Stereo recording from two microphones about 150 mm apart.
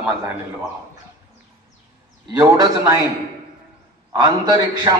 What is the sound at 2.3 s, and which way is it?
Speech, 25° right (ahead or behind).